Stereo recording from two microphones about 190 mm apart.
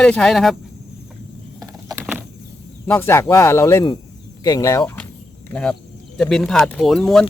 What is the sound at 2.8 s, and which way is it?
Speech, 10° left (ahead or behind).